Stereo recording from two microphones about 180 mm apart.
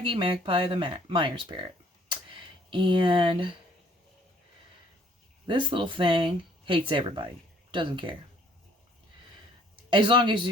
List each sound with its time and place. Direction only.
0.0 s speech: 30° right (ahead or behind)
5.5 s speech: 25° right (ahead or behind)
9.9 s speech: 25° right (ahead or behind)